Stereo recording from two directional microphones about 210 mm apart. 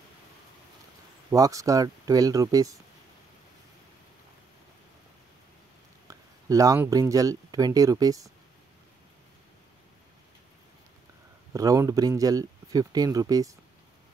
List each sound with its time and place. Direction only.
1.3 s speech: 15° right (ahead or behind)
6.0 s speech: 15° right (ahead or behind)
11.5 s speech: 15° right (ahead or behind)